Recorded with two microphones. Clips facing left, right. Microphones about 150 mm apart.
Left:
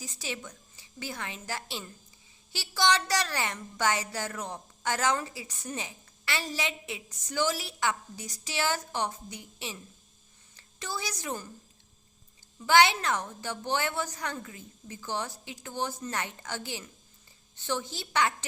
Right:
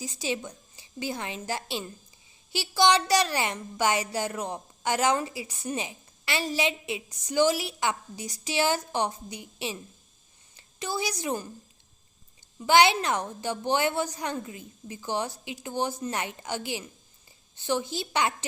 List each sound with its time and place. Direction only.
0.0 s a woman's voice: 15° right (ahead or behind)
12.5 s a woman's voice: 15° right (ahead or behind)